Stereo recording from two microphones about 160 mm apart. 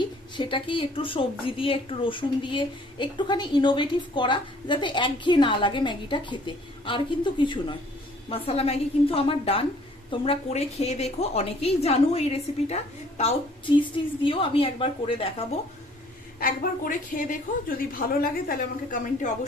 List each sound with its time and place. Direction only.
0.0 s a woman's voice: 30° left (ahead or behind)
13.7 s a woman's voice: 30° left (ahead or behind)
16.4 s a woman's voice: 60° left (ahead or behind)